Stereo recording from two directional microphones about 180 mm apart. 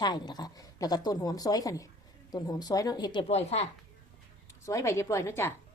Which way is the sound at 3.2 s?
35° left (ahead or behind).